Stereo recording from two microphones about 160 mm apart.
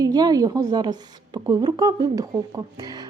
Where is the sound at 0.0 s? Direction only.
25° right (ahead or behind).